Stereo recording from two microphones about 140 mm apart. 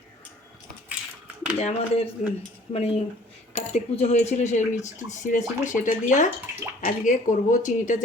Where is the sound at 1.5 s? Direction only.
50° left (ahead or behind).